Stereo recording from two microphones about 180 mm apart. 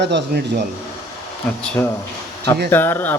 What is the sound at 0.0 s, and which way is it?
Speech, 75° right (ahead or behind).